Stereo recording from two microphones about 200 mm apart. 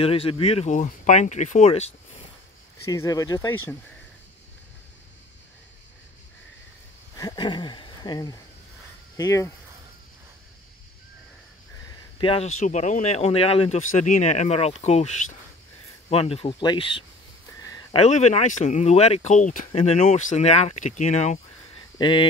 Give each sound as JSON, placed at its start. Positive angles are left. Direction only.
{"t": 0.0, "sound": "speech", "side_deg": 30}
{"t": 2.9, "sound": "speech", "side_deg": 15}
{"t": 7.2, "sound": "speech", "side_deg": 20}
{"t": 12.2, "sound": "speech", "side_deg": 30}
{"t": 16.1, "sound": "speech", "side_deg": 30}
{"t": 17.6, "sound": "a sound", "side_deg": 20}
{"t": 17.9, "sound": "speech", "side_deg": 35}
{"t": 21.9, "sound": "speech", "side_deg": 25}